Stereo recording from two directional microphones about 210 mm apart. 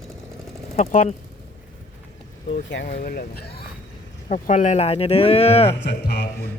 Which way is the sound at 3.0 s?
45° left (ahead or behind).